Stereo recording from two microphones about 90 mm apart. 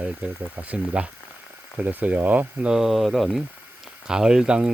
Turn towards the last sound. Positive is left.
turn(degrees=-10)  # may be behind; listen again after turning